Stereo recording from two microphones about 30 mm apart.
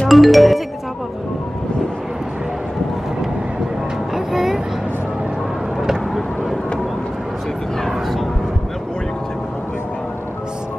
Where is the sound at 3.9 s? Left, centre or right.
Centre.